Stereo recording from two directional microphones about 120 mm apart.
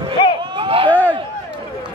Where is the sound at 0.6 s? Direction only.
50° right (ahead or behind).